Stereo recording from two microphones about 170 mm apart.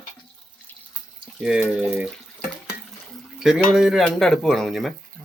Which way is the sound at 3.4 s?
5° right (ahead or behind).